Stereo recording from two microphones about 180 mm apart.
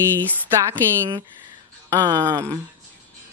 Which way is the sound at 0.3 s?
15° right (ahead or behind).